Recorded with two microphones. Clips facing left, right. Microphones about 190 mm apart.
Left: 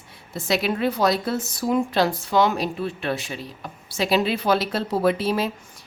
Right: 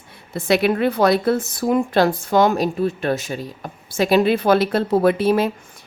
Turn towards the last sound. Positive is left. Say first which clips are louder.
# right 5 dB
turn(degrees=-55)  # may be behind; listen again after turning